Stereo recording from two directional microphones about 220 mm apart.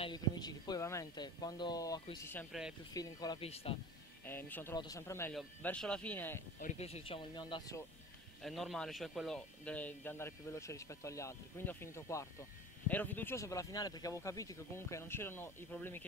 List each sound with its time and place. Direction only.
0.0 s speech: 20° left (ahead or behind)
4.2 s speech: 10° left (ahead or behind)
6.6 s speech: 30° left (ahead or behind)
8.4 s speech: centre (ahead or behind)